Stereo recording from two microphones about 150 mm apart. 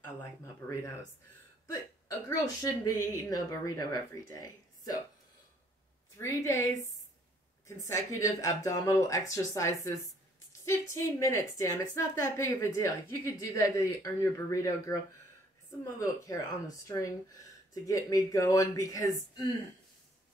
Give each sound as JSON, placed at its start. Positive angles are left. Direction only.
{"t": 0.0, "sound": "a woman's voice", "side_deg": 20}
{"t": 6.1, "sound": "a woman's voice", "side_deg": 20}
{"t": 7.6, "sound": "a woman's voice", "side_deg": 20}